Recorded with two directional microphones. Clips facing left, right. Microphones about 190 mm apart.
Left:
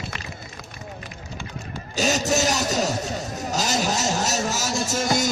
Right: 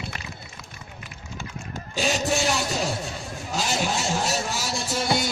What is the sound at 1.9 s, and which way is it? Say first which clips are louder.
A man's voice: left 2 dB; 40° left (ahead or behind).